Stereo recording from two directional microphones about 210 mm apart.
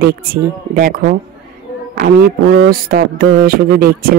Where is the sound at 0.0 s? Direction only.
45° right (ahead or behind).